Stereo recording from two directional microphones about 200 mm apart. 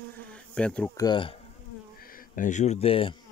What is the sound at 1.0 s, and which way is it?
Speech, 25° left (ahead or behind).